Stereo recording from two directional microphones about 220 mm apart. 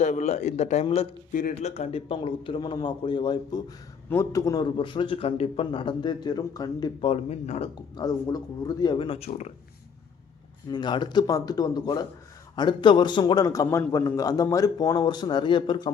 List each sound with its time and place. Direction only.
0.0 s a man's voice: 30° left (ahead or behind)
7.9 s a man's voice: 15° left (ahead or behind)
10.7 s a man's voice: 20° left (ahead or behind)